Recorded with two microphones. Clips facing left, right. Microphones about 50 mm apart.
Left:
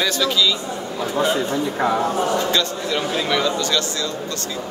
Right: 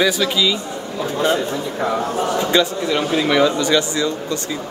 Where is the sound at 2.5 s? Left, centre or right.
Centre.